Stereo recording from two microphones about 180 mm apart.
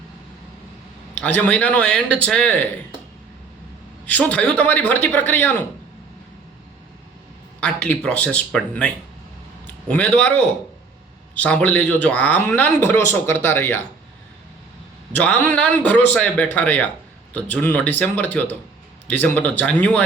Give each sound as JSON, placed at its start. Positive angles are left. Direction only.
{"t": 1.2, "sound": "speech", "side_deg": 5}
{"t": 4.0, "sound": "speech", "side_deg": 10}
{"t": 7.6, "sound": "speech", "side_deg": 5}
{"t": 9.9, "sound": "speech", "side_deg": 10}
{"t": 15.1, "sound": "speech", "side_deg": 10}